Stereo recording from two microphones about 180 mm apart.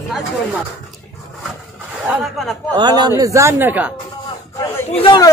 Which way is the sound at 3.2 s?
15° right (ahead or behind).